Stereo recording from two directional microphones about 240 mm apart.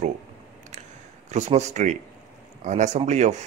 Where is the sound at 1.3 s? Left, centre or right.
Right.